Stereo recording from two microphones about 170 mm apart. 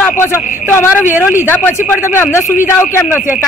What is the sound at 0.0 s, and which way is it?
A man's voice, 15° left (ahead or behind).